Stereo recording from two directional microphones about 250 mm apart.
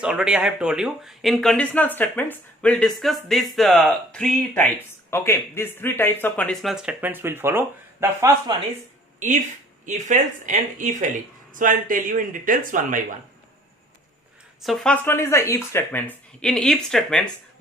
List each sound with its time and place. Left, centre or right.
0.0 s speech: centre
9.8 s speech: right
14.6 s speech: centre